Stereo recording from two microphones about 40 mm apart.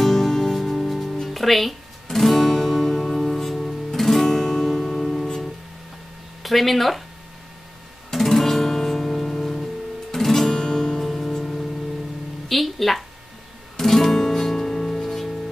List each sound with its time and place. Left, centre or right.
0.0 s music: centre
1.3 s guitar: centre
6.4 s speech: centre
8.1 s music: centre
11.1 s music: centre